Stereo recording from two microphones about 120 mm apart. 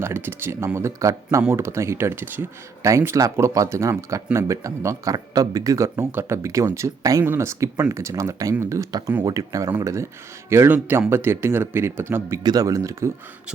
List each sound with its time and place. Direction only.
0.0 s speech: 20° right (ahead or behind)
12.4 s speech: 35° right (ahead or behind)